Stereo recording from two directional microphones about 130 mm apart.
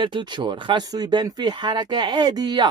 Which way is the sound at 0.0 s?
35° right (ahead or behind).